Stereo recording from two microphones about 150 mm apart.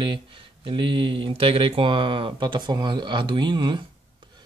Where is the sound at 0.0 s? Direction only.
35° right (ahead or behind).